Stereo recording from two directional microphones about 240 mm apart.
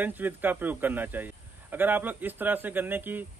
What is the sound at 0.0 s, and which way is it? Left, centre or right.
Speech, centre.